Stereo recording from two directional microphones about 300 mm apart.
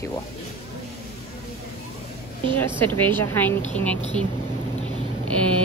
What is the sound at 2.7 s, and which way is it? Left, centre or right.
Speech, centre.